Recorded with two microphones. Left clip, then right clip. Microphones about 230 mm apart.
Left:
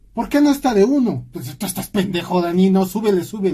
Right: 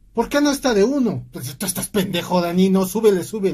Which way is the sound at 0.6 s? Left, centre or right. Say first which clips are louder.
Left 2 dB; right.